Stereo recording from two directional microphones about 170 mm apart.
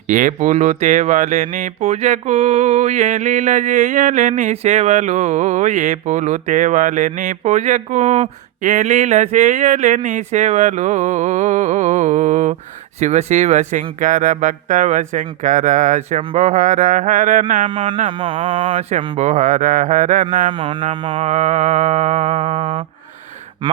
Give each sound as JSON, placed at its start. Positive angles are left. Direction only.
{"t": 0.1, "sound": "speech", "side_deg": -50}
{"t": 17.7, "sound": "speech", "side_deg": -30}
{"t": 20.5, "sound": "speech", "side_deg": -30}
{"t": 21.2, "sound": "speech", "side_deg": -45}